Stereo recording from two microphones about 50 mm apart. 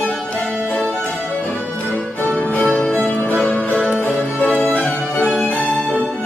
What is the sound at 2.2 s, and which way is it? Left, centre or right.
Music, left.